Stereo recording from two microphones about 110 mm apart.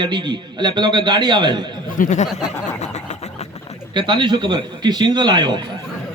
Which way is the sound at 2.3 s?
90° left.